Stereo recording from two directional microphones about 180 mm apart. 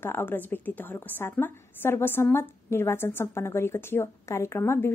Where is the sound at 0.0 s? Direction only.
10° left (ahead or behind).